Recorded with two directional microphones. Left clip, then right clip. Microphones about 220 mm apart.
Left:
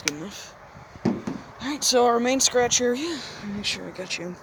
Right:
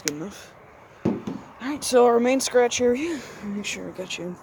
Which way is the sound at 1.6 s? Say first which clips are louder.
Right 2 dB; 30° right (ahead or behind).